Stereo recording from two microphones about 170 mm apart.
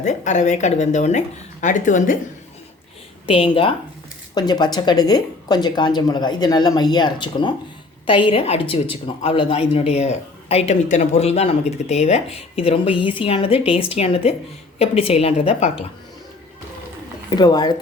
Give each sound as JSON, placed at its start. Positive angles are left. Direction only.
{"t": 0.0, "sound": "a woman's voice", "side_deg": 45}
{"t": 3.2, "sound": "a man's voice", "side_deg": 30}
{"t": 17.2, "sound": "speech", "side_deg": 25}